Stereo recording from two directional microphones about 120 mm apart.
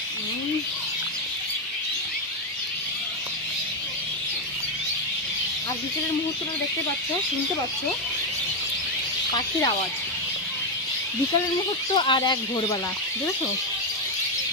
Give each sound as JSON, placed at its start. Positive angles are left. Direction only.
{"t": 11.9, "sound": "speech", "side_deg": 40}